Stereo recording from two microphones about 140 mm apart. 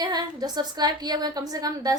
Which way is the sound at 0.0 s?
30° right (ahead or behind).